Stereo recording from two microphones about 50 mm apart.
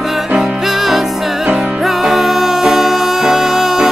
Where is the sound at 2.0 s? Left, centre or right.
Centre.